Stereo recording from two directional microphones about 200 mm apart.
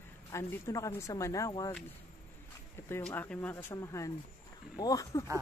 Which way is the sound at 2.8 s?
10° left (ahead or behind).